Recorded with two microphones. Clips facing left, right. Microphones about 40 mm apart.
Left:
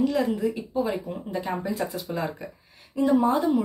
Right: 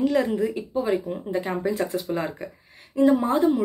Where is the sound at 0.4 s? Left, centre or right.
Right.